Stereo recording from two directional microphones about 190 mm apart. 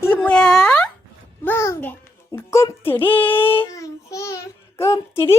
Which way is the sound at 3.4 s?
30° left (ahead or behind).